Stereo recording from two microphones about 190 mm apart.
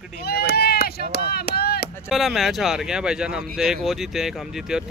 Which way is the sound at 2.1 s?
Centre (ahead or behind).